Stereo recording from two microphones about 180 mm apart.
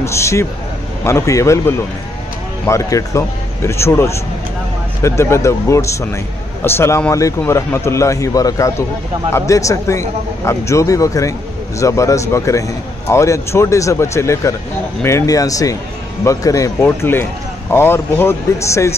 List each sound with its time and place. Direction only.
0.0 s speech: 15° left (ahead or behind)